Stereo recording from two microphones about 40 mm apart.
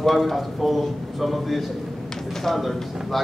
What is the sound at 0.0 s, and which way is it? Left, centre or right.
A man's voice, centre.